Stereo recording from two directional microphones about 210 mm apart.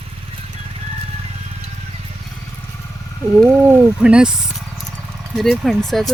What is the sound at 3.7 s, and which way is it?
Speech, 5° right (ahead or behind).